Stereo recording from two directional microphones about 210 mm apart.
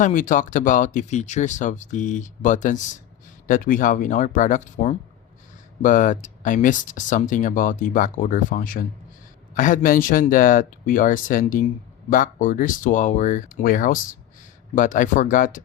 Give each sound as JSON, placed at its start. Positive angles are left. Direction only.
{"t": 0.0, "sound": "speech", "side_deg": 40}